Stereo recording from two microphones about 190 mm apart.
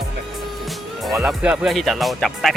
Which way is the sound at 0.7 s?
Centre (ahead or behind).